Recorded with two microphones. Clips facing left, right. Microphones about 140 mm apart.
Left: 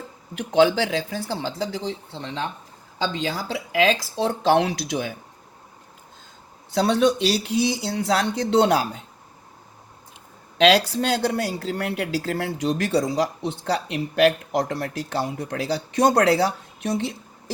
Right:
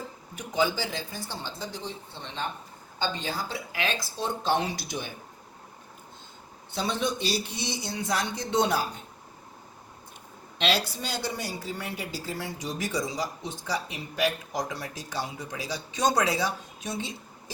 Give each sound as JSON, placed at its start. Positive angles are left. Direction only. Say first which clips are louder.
{"t": 0.3, "sound": "speech", "louder": "left 9 dB", "side_deg": 75}
{"t": 6.7, "sound": "speech", "louder": "left 10 dB", "side_deg": 85}
{"t": 10.6, "sound": "speech", "louder": "left 10 dB", "side_deg": 90}